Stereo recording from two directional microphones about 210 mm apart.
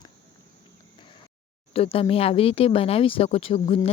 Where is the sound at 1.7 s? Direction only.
25° left (ahead or behind).